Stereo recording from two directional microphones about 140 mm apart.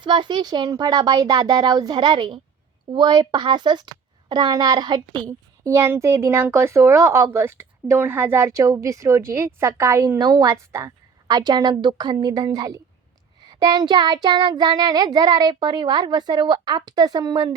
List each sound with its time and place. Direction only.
0.0 s speech: 35° right (ahead or behind)
2.9 s child singing: 30° right (ahead or behind)
4.3 s speech: 30° right (ahead or behind)
5.7 s speech: 20° right (ahead or behind)
13.4 s child singing: 30° right (ahead or behind)